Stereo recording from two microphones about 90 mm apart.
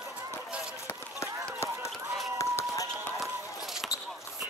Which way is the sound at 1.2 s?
35° left (ahead or behind).